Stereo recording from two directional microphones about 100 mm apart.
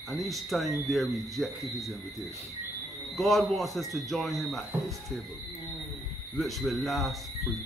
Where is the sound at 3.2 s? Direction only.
Centre (ahead or behind).